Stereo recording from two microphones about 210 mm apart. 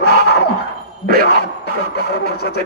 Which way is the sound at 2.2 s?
50° left (ahead or behind).